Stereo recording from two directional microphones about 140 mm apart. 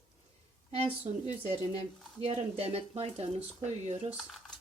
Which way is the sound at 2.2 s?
50° right (ahead or behind).